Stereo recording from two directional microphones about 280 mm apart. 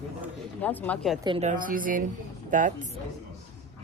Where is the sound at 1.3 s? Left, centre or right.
Right.